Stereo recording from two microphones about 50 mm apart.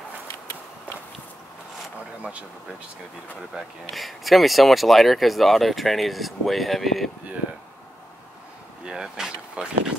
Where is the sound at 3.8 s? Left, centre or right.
Centre.